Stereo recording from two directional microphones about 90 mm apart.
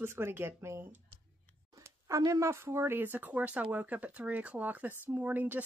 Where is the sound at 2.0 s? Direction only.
40° right (ahead or behind).